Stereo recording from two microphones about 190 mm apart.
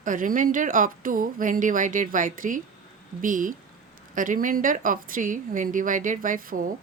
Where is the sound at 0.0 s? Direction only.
45° right (ahead or behind).